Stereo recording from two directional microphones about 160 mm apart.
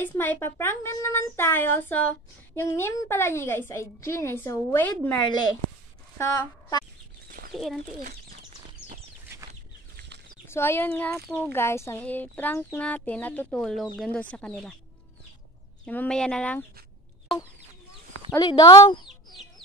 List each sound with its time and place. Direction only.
0.0 s speech: 10° left (ahead or behind)
6.1 s a woman's voice: 20° left (ahead or behind)
7.2 s chicken: 65° right (ahead or behind)
7.5 s speech: centre (ahead or behind)
9.5 s a sound: 90° right
10.4 s speech: 15° left (ahead or behind)
15.8 s speech: 10° left (ahead or behind)
18.4 s speech: 25° left (ahead or behind)